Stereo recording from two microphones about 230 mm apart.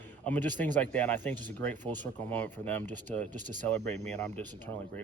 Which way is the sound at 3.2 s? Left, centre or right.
Right.